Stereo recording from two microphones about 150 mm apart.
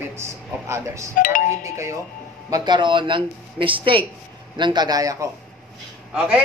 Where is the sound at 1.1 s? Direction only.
65° left (ahead or behind).